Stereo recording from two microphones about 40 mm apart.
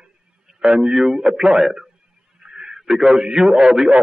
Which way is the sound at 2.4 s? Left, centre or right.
Centre.